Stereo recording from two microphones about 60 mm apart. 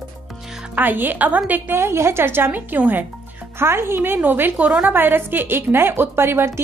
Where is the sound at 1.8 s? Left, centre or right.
Right.